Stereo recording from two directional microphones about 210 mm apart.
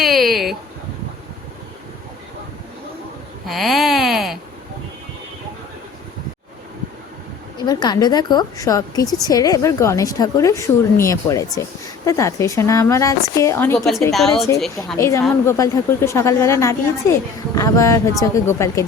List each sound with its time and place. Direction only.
0.0 s a sound: centre (ahead or behind)
3.4 s a sound: centre (ahead or behind)
7.6 s a woman's voice: 20° left (ahead or behind); by 14.4 s centre (ahead or behind)
14.9 s speech: 15° left (ahead or behind)
15.2 s a woman's voice: 5° left (ahead or behind)
15.5 s speech: 15° left (ahead or behind)